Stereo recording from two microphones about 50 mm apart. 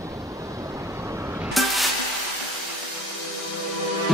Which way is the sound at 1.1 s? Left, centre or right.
Right.